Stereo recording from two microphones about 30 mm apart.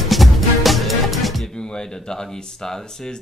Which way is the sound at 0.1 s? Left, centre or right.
Centre.